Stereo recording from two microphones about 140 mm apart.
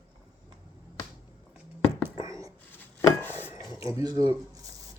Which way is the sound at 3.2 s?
15° left (ahead or behind).